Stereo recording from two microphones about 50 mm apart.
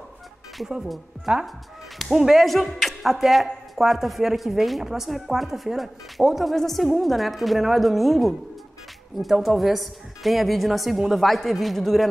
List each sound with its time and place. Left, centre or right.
1.3 s speech: centre
2.4 s a woman's voice: centre